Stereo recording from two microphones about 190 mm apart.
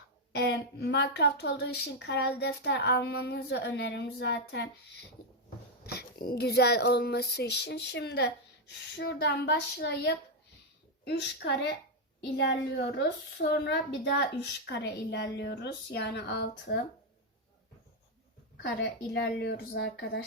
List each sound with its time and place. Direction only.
0.3 s a woman's voice: 60° left (ahead or behind)
5.8 s a woman's voice: 55° left (ahead or behind)
18.6 s a woman's voice: 60° left (ahead or behind)